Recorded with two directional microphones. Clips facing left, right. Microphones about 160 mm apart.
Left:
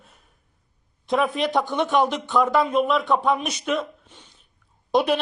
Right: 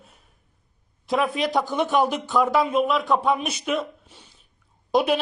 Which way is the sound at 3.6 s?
5° right (ahead or behind).